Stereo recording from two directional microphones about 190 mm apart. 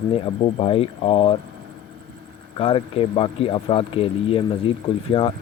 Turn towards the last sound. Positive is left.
turn(degrees=25)  # may be behind; listen again after turning